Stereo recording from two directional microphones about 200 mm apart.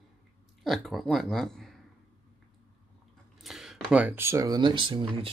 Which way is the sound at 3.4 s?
Centre (ahead or behind).